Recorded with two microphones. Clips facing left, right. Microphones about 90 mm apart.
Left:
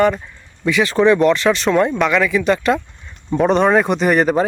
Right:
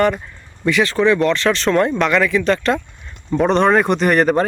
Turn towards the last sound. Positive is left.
turn(degrees=5)  # may be behind; listen again after turning